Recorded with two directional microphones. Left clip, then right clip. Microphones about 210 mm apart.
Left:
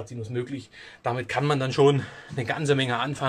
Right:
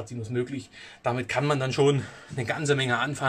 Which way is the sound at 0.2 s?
5° left (ahead or behind).